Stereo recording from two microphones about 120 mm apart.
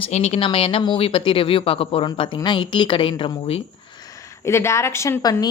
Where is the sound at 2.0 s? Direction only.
40° left (ahead or behind).